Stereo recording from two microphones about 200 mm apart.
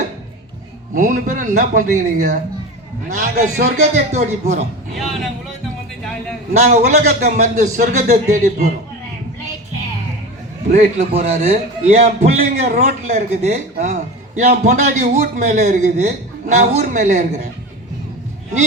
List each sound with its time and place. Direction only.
0.9 s a man's voice: 40° right (ahead or behind)
4.9 s speech: centre (ahead or behind)
6.6 s a man's voice: 35° right (ahead or behind)
10.7 s a man's voice: 35° right (ahead or behind)